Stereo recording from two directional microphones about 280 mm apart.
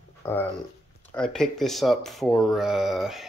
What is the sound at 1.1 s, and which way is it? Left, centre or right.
Speech, centre.